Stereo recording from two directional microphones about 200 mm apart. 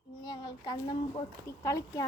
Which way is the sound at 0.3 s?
20° left (ahead or behind).